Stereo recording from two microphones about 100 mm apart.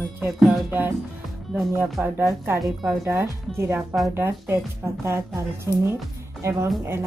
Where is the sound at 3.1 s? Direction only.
25° right (ahead or behind).